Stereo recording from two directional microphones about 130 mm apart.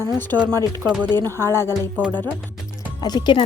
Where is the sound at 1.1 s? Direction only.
30° right (ahead or behind).